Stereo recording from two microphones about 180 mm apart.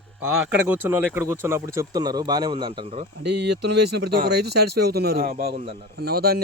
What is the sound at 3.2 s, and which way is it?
Speech, 70° right (ahead or behind).